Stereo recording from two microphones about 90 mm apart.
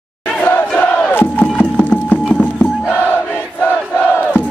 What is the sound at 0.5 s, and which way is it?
Crowd, 20° left (ahead or behind).